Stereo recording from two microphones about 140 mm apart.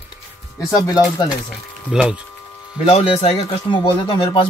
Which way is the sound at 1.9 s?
5° right (ahead or behind).